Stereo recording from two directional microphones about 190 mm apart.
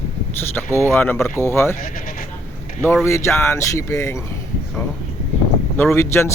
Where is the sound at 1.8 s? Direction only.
45° left (ahead or behind).